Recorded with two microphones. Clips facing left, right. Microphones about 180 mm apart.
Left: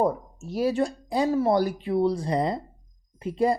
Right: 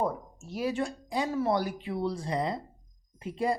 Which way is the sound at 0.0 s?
40° left (ahead or behind).